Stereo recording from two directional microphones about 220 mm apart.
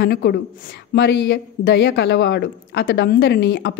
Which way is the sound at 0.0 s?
50° left (ahead or behind).